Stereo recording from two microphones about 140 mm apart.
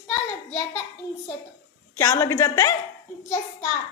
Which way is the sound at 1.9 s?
20° left (ahead or behind).